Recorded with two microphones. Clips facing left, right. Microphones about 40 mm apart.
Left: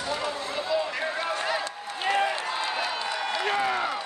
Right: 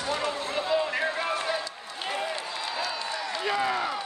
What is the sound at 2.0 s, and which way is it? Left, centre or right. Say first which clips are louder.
Applause: left 7 dB; left.